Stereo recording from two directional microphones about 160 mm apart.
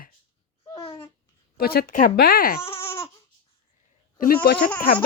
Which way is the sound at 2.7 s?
15° left (ahead or behind).